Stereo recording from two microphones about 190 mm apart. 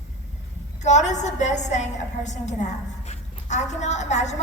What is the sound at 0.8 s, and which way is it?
A woman's voice, 40° left (ahead or behind).